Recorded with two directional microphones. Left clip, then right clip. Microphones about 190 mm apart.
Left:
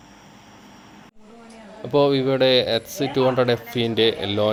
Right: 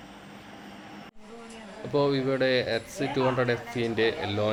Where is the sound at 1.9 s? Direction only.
25° left (ahead or behind).